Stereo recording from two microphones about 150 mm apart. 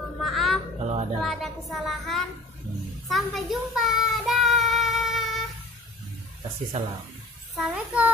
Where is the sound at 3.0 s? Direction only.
Centre (ahead or behind).